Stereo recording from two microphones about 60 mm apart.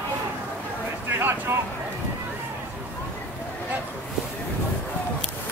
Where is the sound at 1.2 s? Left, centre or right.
Right.